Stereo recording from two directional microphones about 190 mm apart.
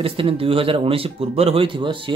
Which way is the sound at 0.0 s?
30° right (ahead or behind).